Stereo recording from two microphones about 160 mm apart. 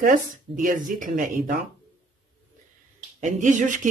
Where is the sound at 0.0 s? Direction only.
55° right (ahead or behind).